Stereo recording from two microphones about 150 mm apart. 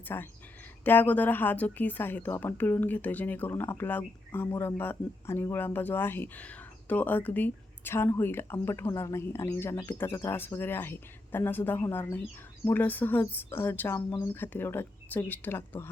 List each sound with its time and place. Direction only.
0.1 s speech: 15° left (ahead or behind)